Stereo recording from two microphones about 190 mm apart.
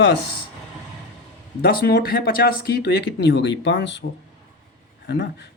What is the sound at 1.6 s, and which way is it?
Speech, 55° left (ahead or behind).